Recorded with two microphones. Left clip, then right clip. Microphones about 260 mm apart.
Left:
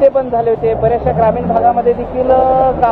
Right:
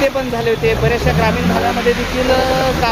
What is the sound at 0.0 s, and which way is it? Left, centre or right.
Speech, centre.